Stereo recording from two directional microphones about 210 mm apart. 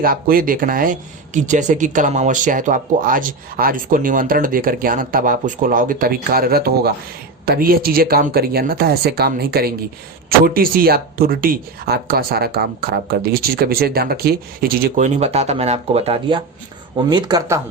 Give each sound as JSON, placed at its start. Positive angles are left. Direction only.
{"t": 0.0, "sound": "speech", "side_deg": -45}